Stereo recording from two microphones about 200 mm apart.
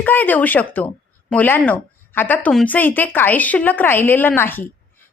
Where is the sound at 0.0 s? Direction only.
10° left (ahead or behind).